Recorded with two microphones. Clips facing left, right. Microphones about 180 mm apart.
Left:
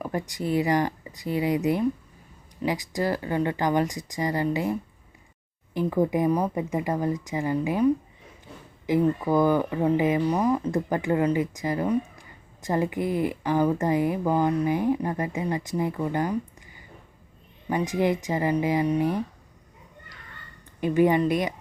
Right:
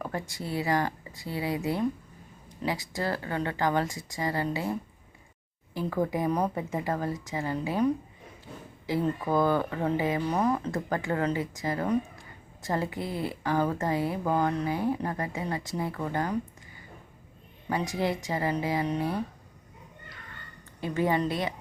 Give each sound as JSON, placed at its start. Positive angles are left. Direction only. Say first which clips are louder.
{"t": 0.0, "sound": "a woman's voice", "louder": "left 5 dB", "side_deg": 15}
{"t": 5.7, "sound": "a woman's voice", "louder": "left 5 dB", "side_deg": 20}
{"t": 8.9, "sound": "a woman's voice", "louder": "left 5 dB", "side_deg": 15}
{"t": 17.7, "sound": "a woman's voice", "louder": "left 5 dB", "side_deg": 15}
{"t": 20.8, "sound": "a woman's voice", "louder": "left 6 dB", "side_deg": 15}